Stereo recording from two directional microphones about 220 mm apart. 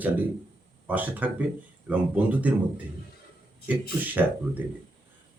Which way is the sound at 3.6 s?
10° right (ahead or behind).